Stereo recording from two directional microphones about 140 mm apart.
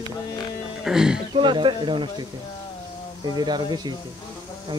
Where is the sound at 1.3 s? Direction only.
35° right (ahead or behind).